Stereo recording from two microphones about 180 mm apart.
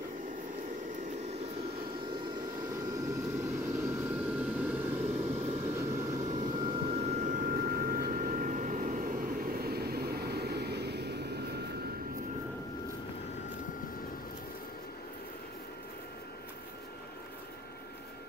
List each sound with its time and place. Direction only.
2.9 s vehicle: 15° right (ahead or behind)
7.0 s vehicle: 40° right (ahead or behind); by 11.4 s 65° right (ahead or behind)